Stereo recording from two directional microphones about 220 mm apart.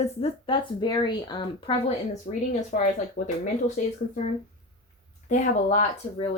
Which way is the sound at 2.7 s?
40° left (ahead or behind).